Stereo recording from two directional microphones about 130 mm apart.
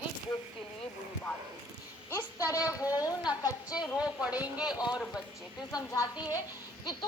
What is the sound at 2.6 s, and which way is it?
Speech, 25° left (ahead or behind).